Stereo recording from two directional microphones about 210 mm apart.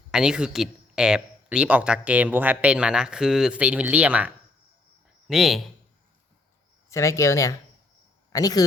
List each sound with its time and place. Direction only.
0.1 s speech: 5° right (ahead or behind)
6.9 s speech: 15° left (ahead or behind)